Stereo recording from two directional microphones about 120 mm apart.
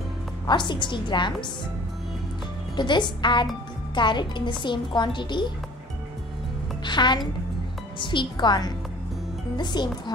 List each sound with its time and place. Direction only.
0.5 s a woman's voice: 40° left (ahead or behind)
2.7 s a woman's voice: 40° left (ahead or behind)
6.8 s a woman's voice: 40° left (ahead or behind)